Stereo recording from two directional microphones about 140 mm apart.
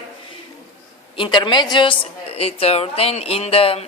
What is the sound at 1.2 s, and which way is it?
A woman's voice, 35° left (ahead or behind).